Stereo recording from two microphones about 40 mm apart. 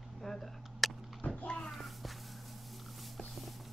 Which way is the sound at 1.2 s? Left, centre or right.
Left.